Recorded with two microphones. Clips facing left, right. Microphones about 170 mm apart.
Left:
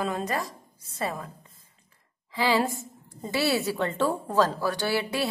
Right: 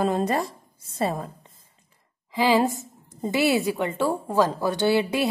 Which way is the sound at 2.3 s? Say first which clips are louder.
Right 4 dB; 20° right (ahead or behind).